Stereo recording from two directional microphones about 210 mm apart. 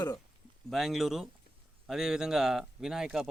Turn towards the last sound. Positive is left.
turn(degrees=0)  # may be behind; listen again after turning